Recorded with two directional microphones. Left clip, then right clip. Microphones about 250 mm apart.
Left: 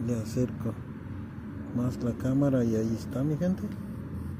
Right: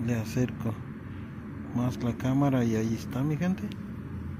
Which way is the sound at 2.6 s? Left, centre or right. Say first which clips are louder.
Even; centre.